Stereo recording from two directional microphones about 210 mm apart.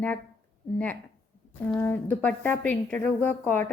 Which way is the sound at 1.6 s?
10° left (ahead or behind).